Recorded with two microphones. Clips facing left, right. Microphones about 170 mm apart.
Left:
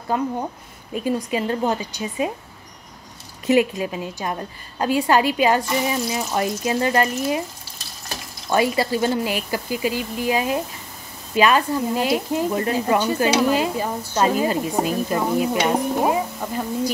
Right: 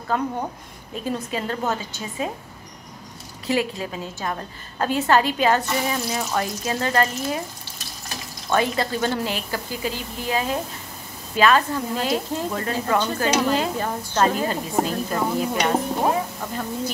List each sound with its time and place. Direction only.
0.9 s speech: 15° left (ahead or behind)
3.4 s speech: 15° left (ahead or behind)
8.5 s speech: 10° left (ahead or behind)